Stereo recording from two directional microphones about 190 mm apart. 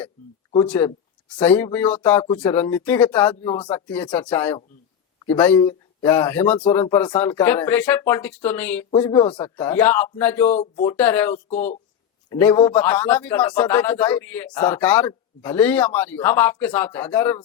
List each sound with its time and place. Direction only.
1.3 s a man's voice: 10° left (ahead or behind)
3.8 s a man's voice: 5° left (ahead or behind)
9.1 s speech: 25° left (ahead or behind)
9.4 s a man's voice: 10° left (ahead or behind)
10.5 s speech: 30° left (ahead or behind)
10.8 s a man's voice: 10° left (ahead or behind)